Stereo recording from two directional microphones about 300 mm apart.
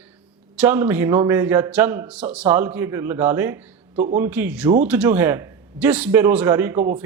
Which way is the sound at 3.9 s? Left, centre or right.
Right.